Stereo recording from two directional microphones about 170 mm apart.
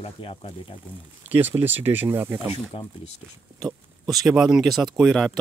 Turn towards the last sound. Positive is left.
turn(degrees=0)  # may be behind; listen again after turning